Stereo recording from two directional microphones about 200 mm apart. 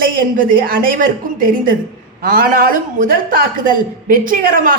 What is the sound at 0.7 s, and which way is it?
A man's voice, 45° right (ahead or behind).